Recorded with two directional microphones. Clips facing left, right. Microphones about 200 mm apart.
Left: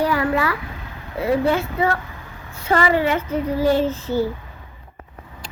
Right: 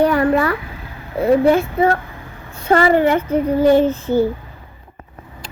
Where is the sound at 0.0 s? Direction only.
55° right (ahead or behind).